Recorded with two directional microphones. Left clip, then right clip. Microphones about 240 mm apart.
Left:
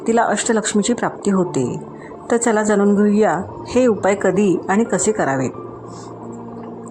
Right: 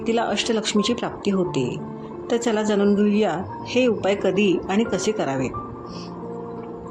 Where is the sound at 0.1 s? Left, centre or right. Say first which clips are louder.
Left 6 dB; left.